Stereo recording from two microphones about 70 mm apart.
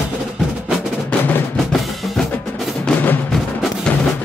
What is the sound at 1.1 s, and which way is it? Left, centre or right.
Music, centre.